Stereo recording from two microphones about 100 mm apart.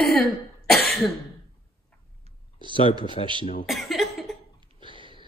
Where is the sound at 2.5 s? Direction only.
55° right (ahead or behind).